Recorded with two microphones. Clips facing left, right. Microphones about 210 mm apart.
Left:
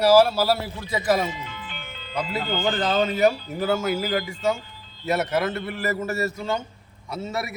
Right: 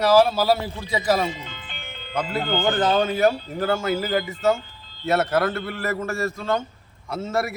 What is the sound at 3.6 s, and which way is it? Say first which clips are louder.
Speech: even; 5° left (ahead or behind).